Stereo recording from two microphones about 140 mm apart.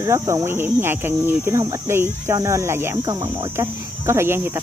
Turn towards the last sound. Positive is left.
turn(degrees=-15)  # may be behind; listen again after turning